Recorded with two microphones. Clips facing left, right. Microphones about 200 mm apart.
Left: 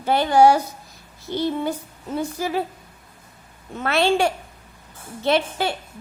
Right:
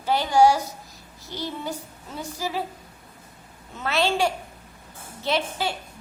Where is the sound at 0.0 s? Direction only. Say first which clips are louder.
Left 3 dB; 60° left (ahead or behind).